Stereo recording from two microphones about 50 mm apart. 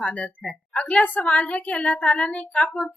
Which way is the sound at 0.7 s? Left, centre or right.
Left.